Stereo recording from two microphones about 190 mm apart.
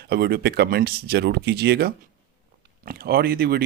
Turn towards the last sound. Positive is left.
turn(degrees=-55)  # may be behind; listen again after turning